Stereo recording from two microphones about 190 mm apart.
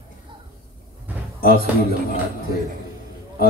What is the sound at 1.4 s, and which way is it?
Speech, 55° right (ahead or behind).